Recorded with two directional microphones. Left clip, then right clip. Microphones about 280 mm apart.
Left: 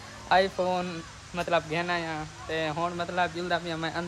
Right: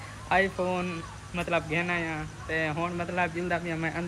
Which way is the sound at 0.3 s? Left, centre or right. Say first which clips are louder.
Left 2 dB; centre.